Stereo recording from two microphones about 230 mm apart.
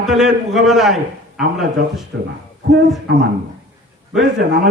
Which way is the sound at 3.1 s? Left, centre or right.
Right.